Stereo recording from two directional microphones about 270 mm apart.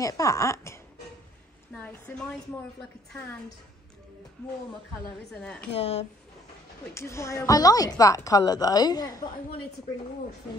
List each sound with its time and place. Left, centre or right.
0.0 s a woman's voice: centre
1.8 s a woman's voice: centre
4.9 s a woman's voice: centre
5.7 s speech: left
6.9 s a woman's voice: centre